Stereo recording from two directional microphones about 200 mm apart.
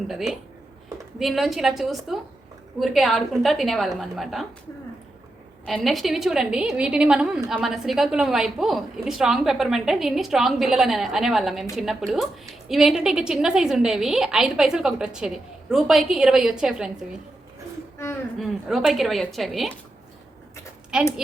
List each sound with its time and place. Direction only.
0.1 s a woman's voice: centre (ahead or behind)
5.6 s a woman's voice: centre (ahead or behind)
18.3 s a woman's voice: centre (ahead or behind)
20.9 s a woman's voice: 5° right (ahead or behind)